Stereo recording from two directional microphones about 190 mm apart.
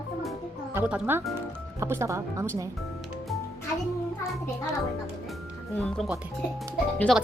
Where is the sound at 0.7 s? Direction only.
10° right (ahead or behind).